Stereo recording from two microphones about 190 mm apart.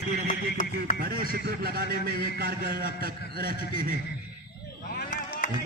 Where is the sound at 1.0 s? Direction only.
55° right (ahead or behind).